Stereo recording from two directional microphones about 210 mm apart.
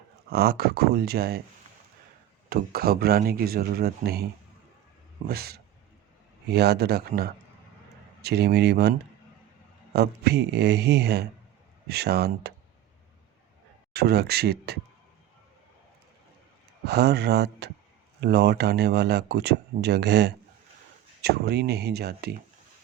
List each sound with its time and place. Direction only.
0.3 s speech: 50° right (ahead or behind)
2.5 s speech: 45° right (ahead or behind)
5.3 s speech: 50° right (ahead or behind)
13.9 s speech: 50° right (ahead or behind)
16.8 s speech: 50° right (ahead or behind)